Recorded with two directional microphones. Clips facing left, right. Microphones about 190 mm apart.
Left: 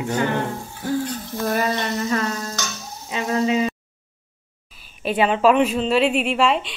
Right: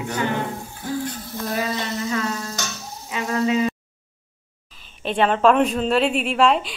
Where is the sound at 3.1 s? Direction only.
30° left (ahead or behind).